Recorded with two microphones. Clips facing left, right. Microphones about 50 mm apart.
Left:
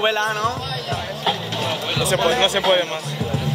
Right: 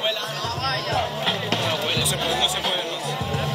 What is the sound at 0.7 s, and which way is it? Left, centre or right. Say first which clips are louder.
Speech: right 3 dB; right.